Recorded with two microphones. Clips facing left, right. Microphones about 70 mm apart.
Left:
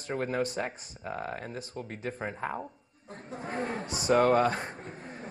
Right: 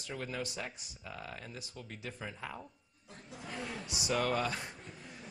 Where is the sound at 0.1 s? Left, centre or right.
Left.